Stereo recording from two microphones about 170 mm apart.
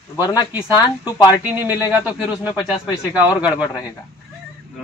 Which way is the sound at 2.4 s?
25° left (ahead or behind).